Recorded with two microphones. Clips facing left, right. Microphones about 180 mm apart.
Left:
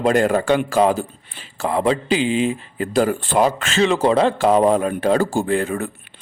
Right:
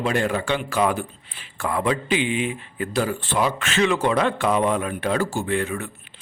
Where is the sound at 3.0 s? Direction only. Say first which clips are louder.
Left 5 dB; 45° left (ahead or behind).